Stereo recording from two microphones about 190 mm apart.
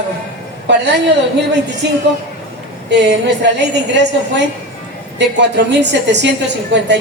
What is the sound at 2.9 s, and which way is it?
A woman's voice, 65° right (ahead or behind).